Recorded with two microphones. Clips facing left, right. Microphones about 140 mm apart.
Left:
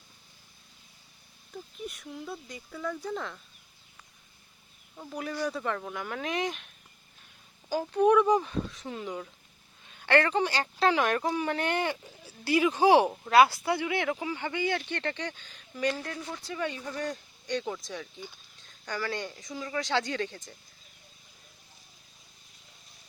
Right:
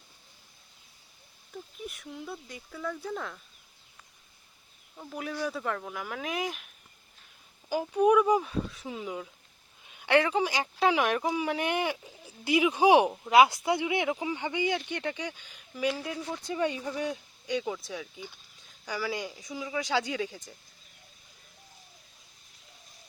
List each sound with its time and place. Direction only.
1.5 s a sound: 5° left (ahead or behind)
1.9 s speech: centre (ahead or behind)
4.9 s speech: centre (ahead or behind)
7.7 s speech: 10° right (ahead or behind)